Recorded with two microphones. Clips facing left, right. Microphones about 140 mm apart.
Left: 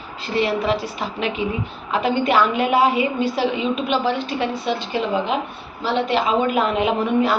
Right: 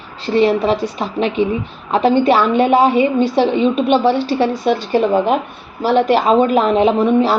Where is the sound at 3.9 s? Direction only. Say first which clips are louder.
Right 7 dB; 30° right (ahead or behind).